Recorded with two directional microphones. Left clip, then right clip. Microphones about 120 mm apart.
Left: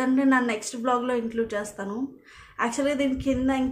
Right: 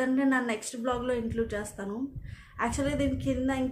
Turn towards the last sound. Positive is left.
turn(degrees=20)  # may be behind; listen again after turning